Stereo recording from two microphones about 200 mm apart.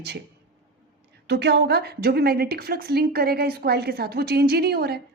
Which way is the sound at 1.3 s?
55° right (ahead or behind).